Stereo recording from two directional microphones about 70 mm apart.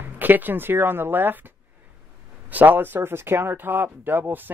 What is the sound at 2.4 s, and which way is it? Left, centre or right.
Speech, right.